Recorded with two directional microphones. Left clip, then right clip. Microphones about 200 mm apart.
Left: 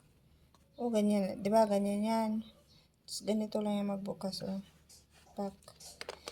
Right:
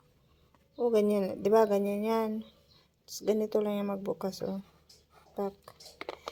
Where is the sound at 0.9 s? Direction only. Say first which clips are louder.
Right 5 dB; 35° right (ahead or behind).